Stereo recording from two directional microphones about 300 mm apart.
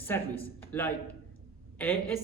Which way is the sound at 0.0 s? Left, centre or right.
Centre.